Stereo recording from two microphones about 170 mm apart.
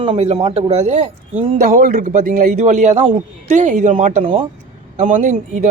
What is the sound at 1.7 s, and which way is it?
Speech, 55° right (ahead or behind).